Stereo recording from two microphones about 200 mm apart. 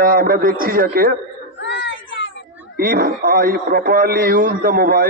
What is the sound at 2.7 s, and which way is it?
A man's voice, 45° right (ahead or behind).